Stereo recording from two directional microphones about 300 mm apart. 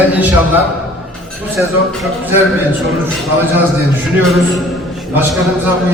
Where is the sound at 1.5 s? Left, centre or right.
Centre.